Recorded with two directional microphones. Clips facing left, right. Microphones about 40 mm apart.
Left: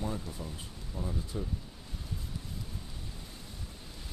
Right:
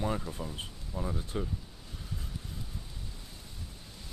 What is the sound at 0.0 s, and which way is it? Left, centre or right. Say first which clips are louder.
Speech: right 4 dB; right.